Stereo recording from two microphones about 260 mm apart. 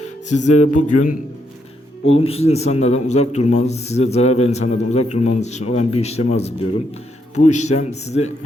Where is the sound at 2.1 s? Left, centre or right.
Left.